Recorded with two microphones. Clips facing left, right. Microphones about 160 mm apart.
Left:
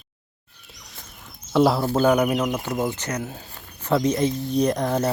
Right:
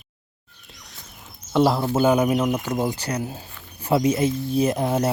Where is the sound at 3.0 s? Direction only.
35° right (ahead or behind).